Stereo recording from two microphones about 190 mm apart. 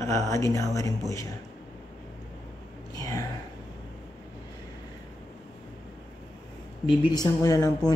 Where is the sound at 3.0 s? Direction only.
15° left (ahead or behind).